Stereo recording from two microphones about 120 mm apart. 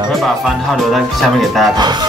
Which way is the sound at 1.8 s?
40° right (ahead or behind).